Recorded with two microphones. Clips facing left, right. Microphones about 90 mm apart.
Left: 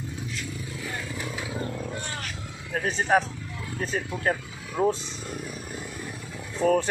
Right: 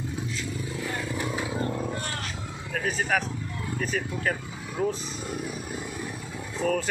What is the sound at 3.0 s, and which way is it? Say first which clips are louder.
Speech: left 7 dB; 30° left (ahead or behind).